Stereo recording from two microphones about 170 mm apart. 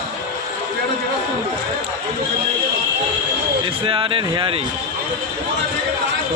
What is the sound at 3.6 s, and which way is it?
Speech, 30° right (ahead or behind).